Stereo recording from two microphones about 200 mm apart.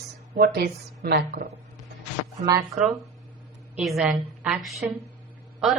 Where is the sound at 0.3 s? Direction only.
50° right (ahead or behind).